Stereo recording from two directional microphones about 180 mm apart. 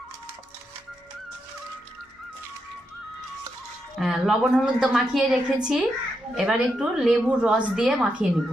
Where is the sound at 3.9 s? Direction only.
Centre (ahead or behind).